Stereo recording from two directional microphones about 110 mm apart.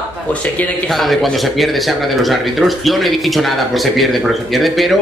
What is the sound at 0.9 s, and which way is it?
Speech, centre (ahead or behind).